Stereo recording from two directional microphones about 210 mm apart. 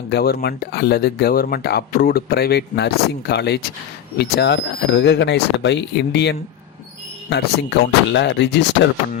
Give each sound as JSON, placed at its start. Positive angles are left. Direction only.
{"t": 0.1, "sound": "speech", "side_deg": 50}